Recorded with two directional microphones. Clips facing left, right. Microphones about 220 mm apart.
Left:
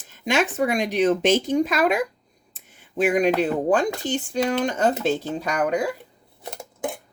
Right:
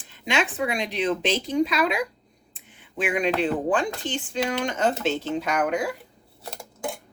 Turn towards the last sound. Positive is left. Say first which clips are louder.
# left 3 dB
turn(degrees=20)  # may be behind; listen again after turning